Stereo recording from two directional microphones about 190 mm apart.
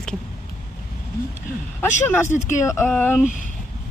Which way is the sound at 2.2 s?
40° left (ahead or behind).